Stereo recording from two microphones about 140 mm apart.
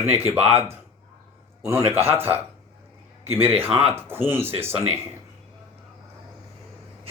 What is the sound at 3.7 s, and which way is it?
Speech, 45° right (ahead or behind).